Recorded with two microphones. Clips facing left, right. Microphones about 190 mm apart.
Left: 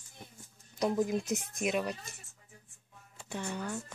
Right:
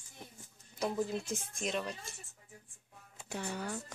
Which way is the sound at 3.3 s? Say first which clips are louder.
Left 2 dB; 10° right (ahead or behind).